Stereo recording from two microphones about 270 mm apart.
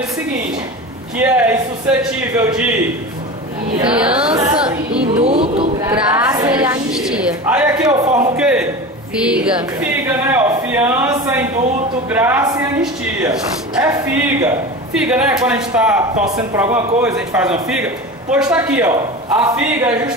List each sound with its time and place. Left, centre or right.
1.1 s a man's voice: centre
3.9 s a man's voice: centre
4.3 s a sound: right
5.0 s speech: right
8.4 s a man's voice: centre